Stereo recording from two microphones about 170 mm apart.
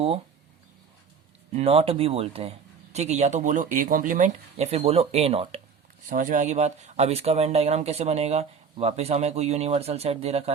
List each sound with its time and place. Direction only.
1.5 s speech: 35° right (ahead or behind)
6.1 s speech: 50° right (ahead or behind)